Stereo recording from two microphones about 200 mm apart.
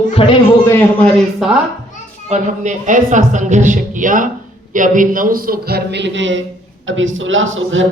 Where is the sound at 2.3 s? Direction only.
40° right (ahead or behind).